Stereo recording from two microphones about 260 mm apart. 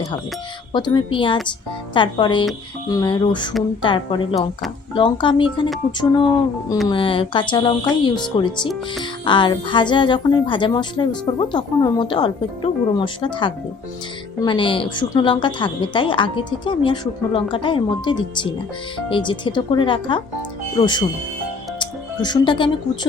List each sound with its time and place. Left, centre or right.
0.7 s a woman's voice: centre
21.8 s music: centre